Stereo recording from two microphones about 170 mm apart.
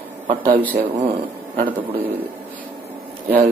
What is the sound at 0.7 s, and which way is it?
Speech, 55° right (ahead or behind).